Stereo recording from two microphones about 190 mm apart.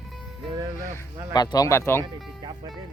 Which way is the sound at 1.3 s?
20° left (ahead or behind).